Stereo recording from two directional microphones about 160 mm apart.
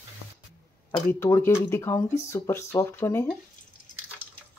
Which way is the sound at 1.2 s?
15° left (ahead or behind).